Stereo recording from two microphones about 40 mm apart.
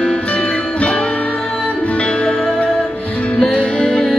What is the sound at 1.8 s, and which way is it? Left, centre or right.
Music, left.